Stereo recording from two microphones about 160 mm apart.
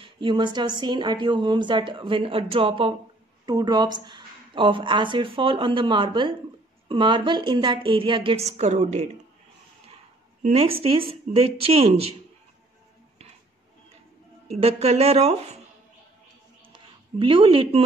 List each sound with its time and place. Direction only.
0.0 s speech: 30° right (ahead or behind)
10.4 s speech: 40° right (ahead or behind)
14.5 s speech: 40° right (ahead or behind)
16.6 s a sound: 35° right (ahead or behind)